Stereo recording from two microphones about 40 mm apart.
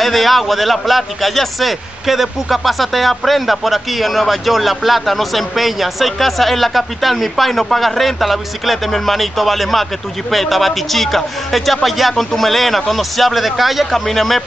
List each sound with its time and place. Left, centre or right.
0.0 s a man's voice: centre